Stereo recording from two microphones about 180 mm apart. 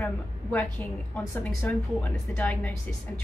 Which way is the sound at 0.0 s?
10° left (ahead or behind).